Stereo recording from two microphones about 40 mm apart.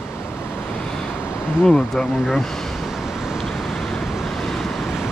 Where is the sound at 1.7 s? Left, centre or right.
Centre.